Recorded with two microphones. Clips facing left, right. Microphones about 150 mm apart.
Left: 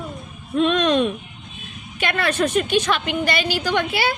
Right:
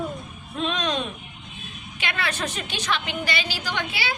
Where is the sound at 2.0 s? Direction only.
50° left (ahead or behind).